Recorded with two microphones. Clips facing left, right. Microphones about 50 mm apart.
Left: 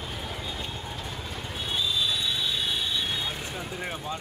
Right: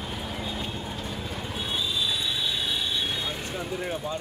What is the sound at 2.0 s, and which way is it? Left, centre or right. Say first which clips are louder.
Vehicle: even; centre.